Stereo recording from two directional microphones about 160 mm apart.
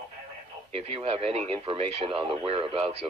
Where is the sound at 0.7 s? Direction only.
40° right (ahead or behind).